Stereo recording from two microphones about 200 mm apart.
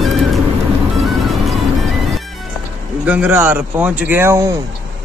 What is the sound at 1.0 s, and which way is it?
Music, centre (ahead or behind).